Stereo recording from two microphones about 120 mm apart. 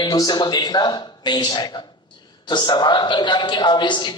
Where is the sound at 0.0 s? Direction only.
35° left (ahead or behind).